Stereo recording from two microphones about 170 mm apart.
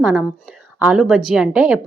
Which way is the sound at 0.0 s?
5° right (ahead or behind).